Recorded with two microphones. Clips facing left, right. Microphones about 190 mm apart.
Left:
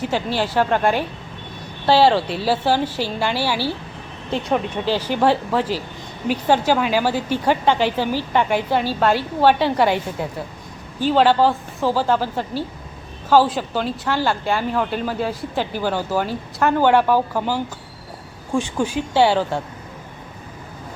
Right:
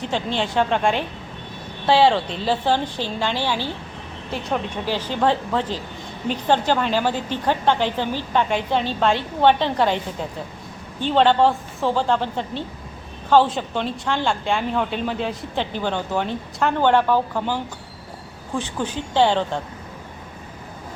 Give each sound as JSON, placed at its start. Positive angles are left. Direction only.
{"t": 0.0, "sound": "a woman's voice", "side_deg": 5}
{"t": 4.9, "sound": "a woman's voice", "side_deg": 10}